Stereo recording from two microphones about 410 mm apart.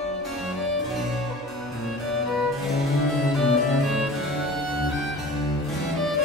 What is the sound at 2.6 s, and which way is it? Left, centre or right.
Music, centre.